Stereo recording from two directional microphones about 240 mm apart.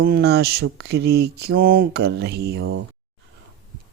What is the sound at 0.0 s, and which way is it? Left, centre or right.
Mantra, right.